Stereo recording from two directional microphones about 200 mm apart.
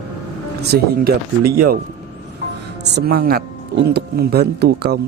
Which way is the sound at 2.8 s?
55° right (ahead or behind).